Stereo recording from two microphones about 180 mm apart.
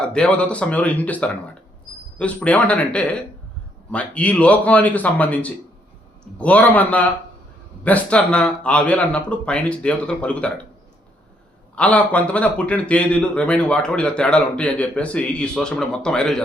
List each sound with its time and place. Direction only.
0.0 s a man's voice: 5° left (ahead or behind)
11.7 s a man's voice: 5° left (ahead or behind)